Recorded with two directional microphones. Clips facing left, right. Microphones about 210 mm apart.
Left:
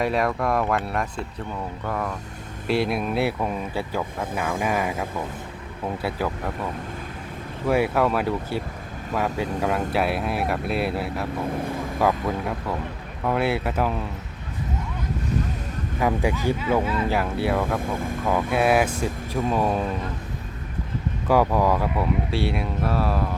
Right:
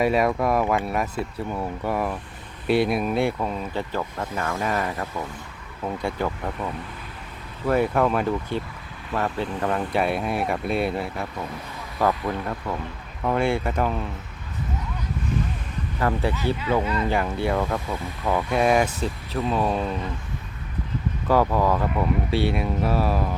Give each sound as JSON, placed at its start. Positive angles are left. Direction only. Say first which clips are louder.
{"t": 0.0, "sound": "speech", "louder": "right 2 dB", "side_deg": -5}
{"t": 6.0, "sound": "speech", "louder": "right 1 dB", "side_deg": 5}
{"t": 7.7, "sound": "speech", "louder": "even", "side_deg": 5}
{"t": 11.5, "sound": "speech", "louder": "left 9 dB", "side_deg": 50}
{"t": 11.9, "sound": "speech", "louder": "even", "side_deg": 15}
{"t": 16.0, "sound": "speech", "louder": "left 1 dB", "side_deg": 15}
{"t": 16.6, "sound": "speech", "louder": "left 1 dB", "side_deg": 0}
{"t": 17.7, "sound": "speech", "louder": "left 3 dB", "side_deg": 50}
{"t": 18.3, "sound": "speech", "louder": "even", "side_deg": 5}
{"t": 21.2, "sound": "speech", "louder": "left 1 dB", "side_deg": 10}